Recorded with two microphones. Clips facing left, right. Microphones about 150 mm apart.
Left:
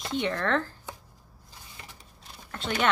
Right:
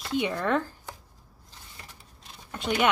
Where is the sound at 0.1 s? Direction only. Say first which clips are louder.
Right 1 dB; 10° right (ahead or behind).